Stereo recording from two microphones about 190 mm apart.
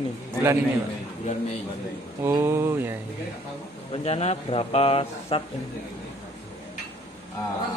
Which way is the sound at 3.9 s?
35° left (ahead or behind).